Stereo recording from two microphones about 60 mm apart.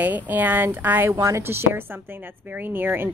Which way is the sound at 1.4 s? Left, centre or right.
Right.